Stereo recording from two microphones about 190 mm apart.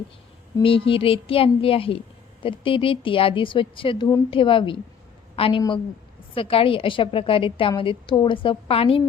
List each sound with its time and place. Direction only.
0.6 s a woman's voice: 30° left (ahead or behind)